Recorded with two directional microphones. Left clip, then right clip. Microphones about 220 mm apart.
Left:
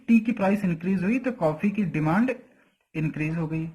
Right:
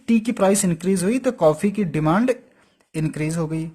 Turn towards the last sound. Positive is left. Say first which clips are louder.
# right 5 dB
turn(degrees=-55)  # may be behind; listen again after turning